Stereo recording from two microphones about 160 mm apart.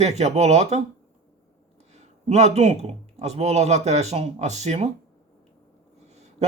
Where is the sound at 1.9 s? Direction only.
45° right (ahead or behind).